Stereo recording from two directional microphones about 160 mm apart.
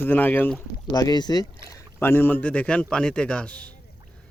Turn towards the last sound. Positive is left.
turn(degrees=10)  # may be behind; listen again after turning